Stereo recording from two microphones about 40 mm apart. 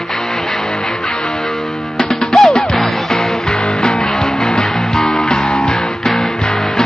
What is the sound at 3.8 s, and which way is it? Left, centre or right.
Music, centre.